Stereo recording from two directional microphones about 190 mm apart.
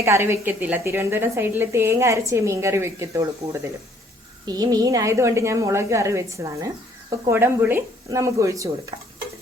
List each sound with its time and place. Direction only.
0.0 s speech: 15° right (ahead or behind)